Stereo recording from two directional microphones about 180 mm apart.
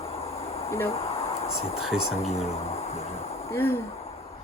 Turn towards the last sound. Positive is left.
turn(degrees=15)  # may be behind; listen again after turning